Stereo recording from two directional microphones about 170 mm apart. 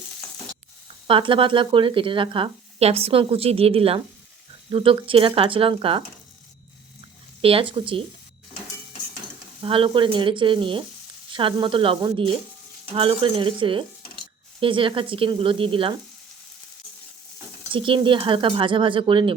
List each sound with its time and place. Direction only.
1.0 s speech: 30° right (ahead or behind)
7.4 s speech: 30° right (ahead or behind)
9.6 s speech: 30° right (ahead or behind)
17.7 s speech: 30° right (ahead or behind)